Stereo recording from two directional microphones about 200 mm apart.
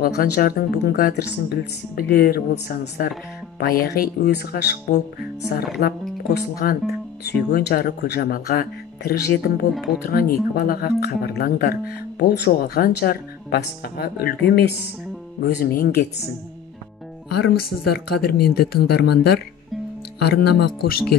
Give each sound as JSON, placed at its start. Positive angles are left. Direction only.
{"t": 0.0, "sound": "speech", "side_deg": 50}
{"t": 9.8, "sound": "speech", "side_deg": 0}
{"t": 10.0, "sound": "speech", "side_deg": 50}
{"t": 15.4, "sound": "speech", "side_deg": 45}
{"t": 17.4, "sound": "speech", "side_deg": 50}